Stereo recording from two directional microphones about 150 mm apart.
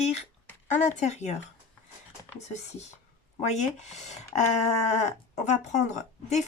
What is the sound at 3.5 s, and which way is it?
Speech, 50° left (ahead or behind).